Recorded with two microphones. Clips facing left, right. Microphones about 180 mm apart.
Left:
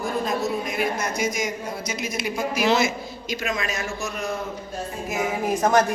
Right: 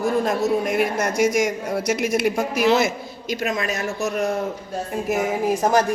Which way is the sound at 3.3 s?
55° right (ahead or behind).